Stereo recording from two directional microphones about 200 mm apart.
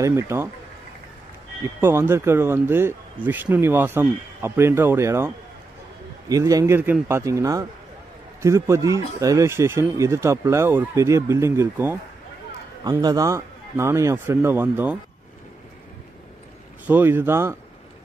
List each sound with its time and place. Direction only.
0.0 s speech: 15° right (ahead or behind)
1.6 s speech: 15° right (ahead or behind)
13.0 s speech: 15° right (ahead or behind)
16.8 s speech: 10° right (ahead or behind)